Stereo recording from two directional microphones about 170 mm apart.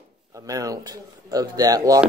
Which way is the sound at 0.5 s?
20° right (ahead or behind).